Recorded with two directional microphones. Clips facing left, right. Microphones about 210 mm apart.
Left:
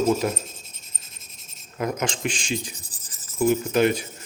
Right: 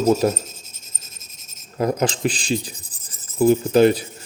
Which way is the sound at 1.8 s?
35° right (ahead or behind).